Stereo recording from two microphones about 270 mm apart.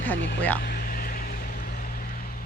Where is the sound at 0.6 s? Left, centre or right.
Left.